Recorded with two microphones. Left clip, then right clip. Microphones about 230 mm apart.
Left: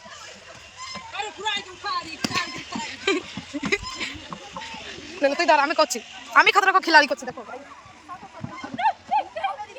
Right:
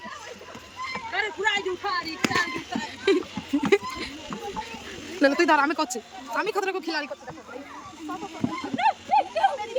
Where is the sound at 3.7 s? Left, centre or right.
Centre.